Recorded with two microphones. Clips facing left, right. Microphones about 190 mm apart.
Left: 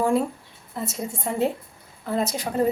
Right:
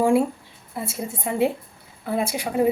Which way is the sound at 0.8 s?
10° right (ahead or behind).